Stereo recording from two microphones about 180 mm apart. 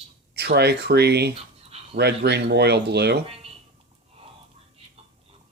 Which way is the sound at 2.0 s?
65° right (ahead or behind).